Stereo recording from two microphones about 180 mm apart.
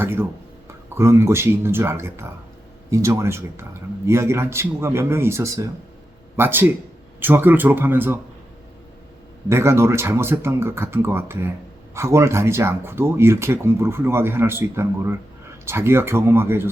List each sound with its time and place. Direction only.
0.0 s speech: 10° right (ahead or behind)
9.5 s speech: 15° right (ahead or behind)